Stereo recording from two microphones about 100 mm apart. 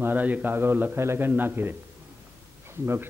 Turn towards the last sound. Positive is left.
turn(degrees=-25)  # may be behind; listen again after turning